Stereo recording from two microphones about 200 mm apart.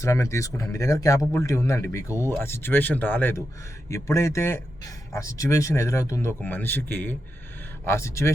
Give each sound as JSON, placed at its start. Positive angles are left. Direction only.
{"t": 0.0, "sound": "speech", "side_deg": 15}